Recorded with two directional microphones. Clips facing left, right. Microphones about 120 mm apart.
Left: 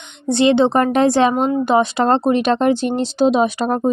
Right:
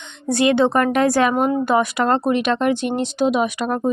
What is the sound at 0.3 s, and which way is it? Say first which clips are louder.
A woman's voice: left 3 dB; 25° left (ahead or behind).